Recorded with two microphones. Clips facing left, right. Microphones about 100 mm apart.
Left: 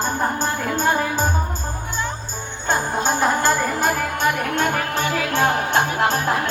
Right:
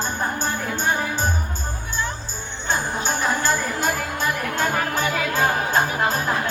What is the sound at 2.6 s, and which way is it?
Music, 45° left (ahead or behind).